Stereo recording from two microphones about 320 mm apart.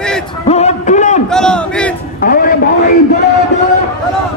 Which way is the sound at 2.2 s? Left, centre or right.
Left.